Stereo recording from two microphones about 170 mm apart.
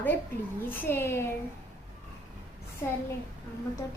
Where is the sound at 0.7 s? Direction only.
10° left (ahead or behind).